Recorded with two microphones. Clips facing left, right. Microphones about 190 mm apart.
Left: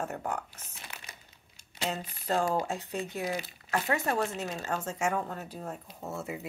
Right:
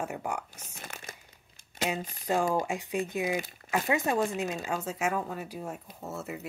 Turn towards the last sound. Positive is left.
turn(degrees=0)  # may be behind; listen again after turning